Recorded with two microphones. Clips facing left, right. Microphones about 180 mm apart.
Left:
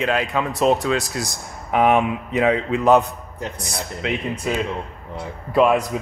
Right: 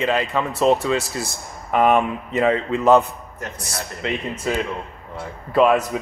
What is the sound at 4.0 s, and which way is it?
Speech, centre (ahead or behind).